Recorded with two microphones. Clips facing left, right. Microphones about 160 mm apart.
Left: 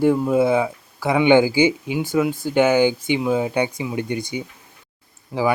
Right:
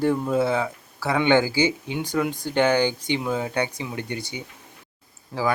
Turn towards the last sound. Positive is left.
turn(degrees=15)  # may be behind; listen again after turning